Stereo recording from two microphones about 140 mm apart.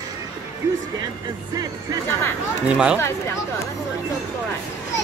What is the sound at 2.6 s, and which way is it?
Speech, 5° right (ahead or behind).